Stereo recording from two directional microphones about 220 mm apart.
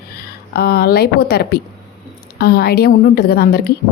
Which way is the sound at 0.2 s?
45° left (ahead or behind).